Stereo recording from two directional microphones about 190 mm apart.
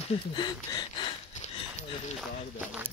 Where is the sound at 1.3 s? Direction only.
35° left (ahead or behind).